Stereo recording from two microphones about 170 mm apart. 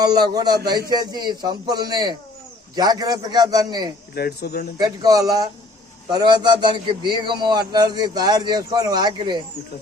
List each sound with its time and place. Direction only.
0.0 s a man's voice: 25° right (ahead or behind)
4.1 s speech: 65° left (ahead or behind)
4.8 s a man's voice: 20° right (ahead or behind)